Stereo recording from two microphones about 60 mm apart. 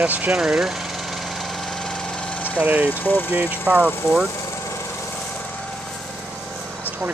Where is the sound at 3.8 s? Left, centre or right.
Centre.